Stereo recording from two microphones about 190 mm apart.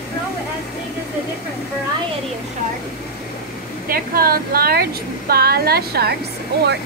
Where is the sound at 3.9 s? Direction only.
50° right (ahead or behind).